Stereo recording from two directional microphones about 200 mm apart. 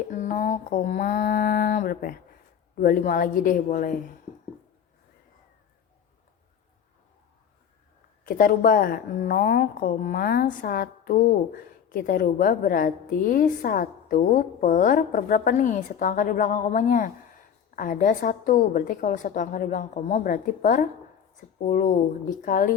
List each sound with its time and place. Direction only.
0.1 s a woman's voice: 40° left (ahead or behind)
8.2 s a woman's voice: 45° left (ahead or behind)